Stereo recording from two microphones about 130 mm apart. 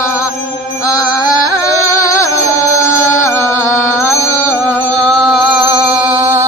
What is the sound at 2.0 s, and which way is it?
Music, 25° left (ahead or behind).